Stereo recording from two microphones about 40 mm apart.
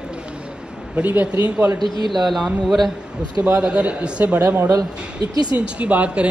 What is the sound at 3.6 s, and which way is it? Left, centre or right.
Speech, right.